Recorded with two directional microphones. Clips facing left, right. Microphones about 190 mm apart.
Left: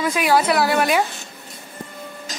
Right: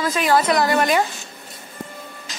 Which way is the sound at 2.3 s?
40° left (ahead or behind).